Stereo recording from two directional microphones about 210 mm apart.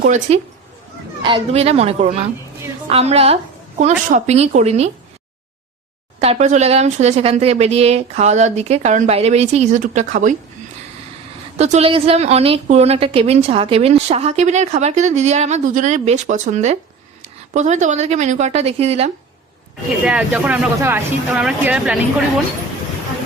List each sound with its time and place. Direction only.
0.0 s a woman's voice: 35° right (ahead or behind)
6.1 s a woman's voice: 30° right (ahead or behind)
11.5 s a woman's voice: 30° right (ahead or behind)
20.1 s speech: 5° right (ahead or behind)